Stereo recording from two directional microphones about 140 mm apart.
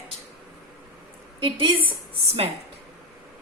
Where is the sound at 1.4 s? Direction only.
40° right (ahead or behind).